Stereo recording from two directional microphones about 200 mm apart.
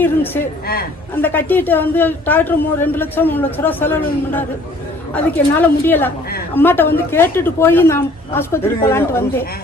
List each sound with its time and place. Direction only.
1.1 s a man's voice: 10° left (ahead or behind)